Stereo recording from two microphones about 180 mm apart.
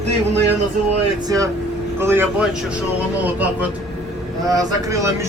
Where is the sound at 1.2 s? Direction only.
20° right (ahead or behind).